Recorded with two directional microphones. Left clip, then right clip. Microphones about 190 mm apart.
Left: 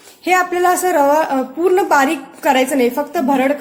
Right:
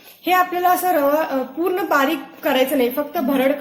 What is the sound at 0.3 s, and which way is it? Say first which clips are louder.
A woman's voice: left 2 dB; 50° left (ahead or behind).